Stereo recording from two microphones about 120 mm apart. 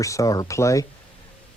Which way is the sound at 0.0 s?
25° left (ahead or behind).